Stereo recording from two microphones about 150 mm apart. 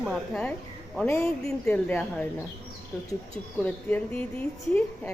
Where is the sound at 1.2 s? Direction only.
5° left (ahead or behind).